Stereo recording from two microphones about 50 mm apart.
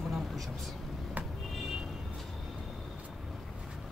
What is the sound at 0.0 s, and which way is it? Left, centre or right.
Vehicle, centre.